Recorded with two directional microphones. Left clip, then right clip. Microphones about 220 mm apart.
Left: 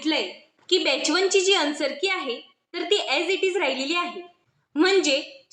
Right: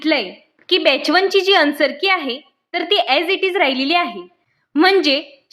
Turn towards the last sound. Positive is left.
turn(degrees=-50)  # may be behind; listen again after turning